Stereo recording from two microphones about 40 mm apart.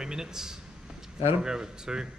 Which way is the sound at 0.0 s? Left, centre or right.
Centre.